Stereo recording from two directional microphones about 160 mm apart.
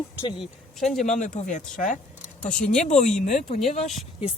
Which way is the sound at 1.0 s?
50° left (ahead or behind).